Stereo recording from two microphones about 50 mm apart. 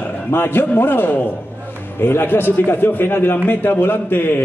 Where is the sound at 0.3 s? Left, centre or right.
Left.